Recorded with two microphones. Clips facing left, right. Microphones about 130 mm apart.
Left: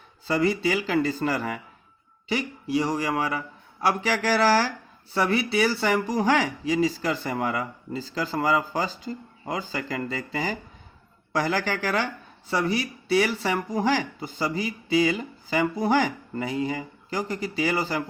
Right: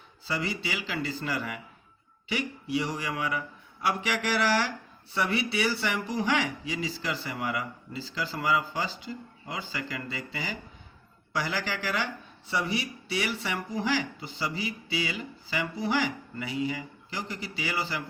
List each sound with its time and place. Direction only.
0.3 s speech: 45° left (ahead or behind)